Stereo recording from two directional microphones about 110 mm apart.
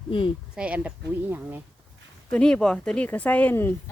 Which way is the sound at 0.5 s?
10° right (ahead or behind).